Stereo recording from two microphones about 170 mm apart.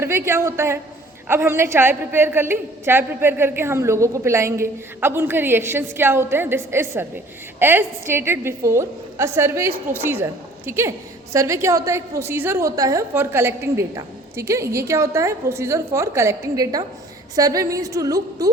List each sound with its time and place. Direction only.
0.0 s a woman's voice: 15° right (ahead or behind)